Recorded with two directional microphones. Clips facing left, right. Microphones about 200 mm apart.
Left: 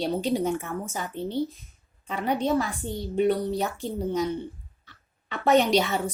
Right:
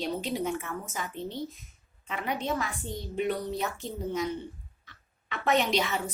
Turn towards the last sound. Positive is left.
turn(degrees=35)  # may be behind; listen again after turning